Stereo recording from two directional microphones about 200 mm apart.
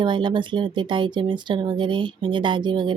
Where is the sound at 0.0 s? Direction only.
25° right (ahead or behind).